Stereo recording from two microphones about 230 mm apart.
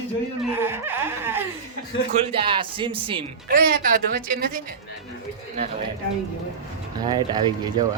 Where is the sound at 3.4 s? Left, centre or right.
Right.